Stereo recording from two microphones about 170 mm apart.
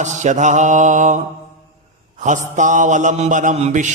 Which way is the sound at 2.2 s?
45° right (ahead or behind).